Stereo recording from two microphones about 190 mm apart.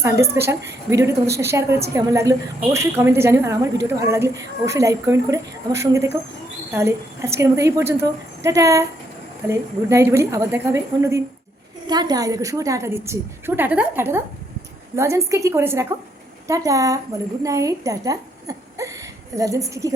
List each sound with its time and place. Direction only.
0.0 s a woman's voice: 15° right (ahead or behind)